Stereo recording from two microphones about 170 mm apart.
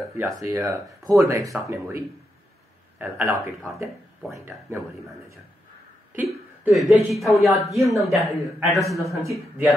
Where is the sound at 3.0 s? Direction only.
15° right (ahead or behind).